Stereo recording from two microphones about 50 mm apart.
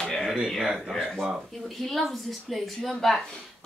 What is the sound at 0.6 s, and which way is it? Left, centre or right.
Speech, centre.